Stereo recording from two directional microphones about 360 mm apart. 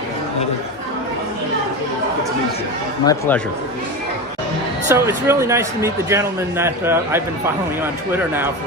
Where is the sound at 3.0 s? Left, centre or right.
Centre.